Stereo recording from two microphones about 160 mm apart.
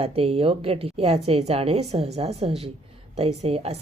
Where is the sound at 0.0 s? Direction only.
40° right (ahead or behind).